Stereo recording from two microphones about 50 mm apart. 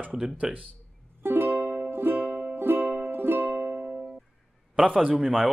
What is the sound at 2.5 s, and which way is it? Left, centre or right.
Music, right.